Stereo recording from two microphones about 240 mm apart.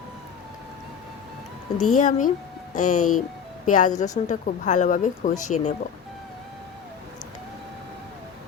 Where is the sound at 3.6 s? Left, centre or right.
Left.